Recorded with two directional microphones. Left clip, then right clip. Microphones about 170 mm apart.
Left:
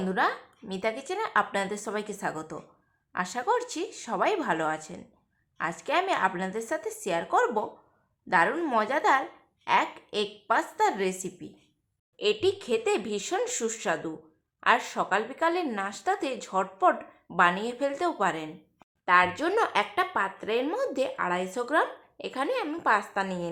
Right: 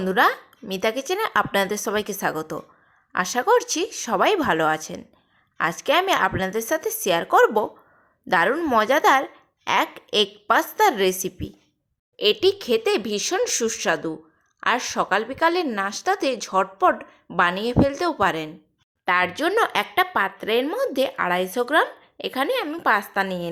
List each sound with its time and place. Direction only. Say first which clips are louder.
0.0 s speech: right 8 dB; 35° right (ahead or behind)